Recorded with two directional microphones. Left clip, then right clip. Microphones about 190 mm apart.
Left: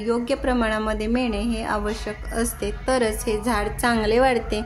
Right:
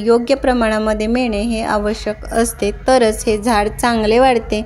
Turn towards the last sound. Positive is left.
turn(degrees=-30)  # may be behind; listen again after turning